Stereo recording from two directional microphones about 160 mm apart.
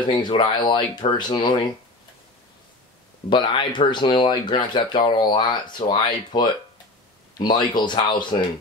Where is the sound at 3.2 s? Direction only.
30° left (ahead or behind).